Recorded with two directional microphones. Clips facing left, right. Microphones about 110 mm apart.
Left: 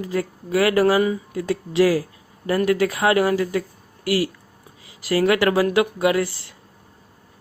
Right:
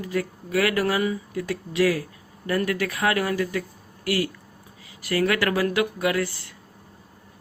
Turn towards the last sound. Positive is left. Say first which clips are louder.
# left 5 dB
turn(degrees=25)  # may be behind; listen again after turning